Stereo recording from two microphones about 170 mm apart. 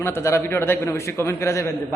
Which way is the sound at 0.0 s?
15° left (ahead or behind).